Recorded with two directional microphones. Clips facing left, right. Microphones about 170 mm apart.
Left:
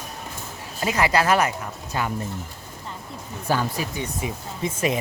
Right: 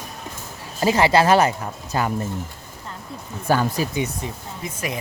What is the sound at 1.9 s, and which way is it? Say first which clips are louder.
Speech: right 4 dB; 40° right (ahead or behind).